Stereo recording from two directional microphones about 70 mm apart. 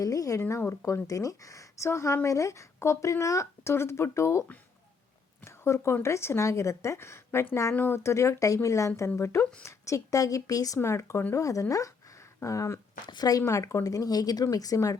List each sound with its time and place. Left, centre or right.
0.0 s speech: left
0.6 s speech: left
0.9 s speech: left
5.5 s speech: left
10.8 s speech: left
11.3 s speech: left
13.1 s speech: left